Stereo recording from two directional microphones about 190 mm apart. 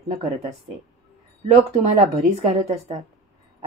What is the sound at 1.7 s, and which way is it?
A woman's voice, 35° right (ahead or behind).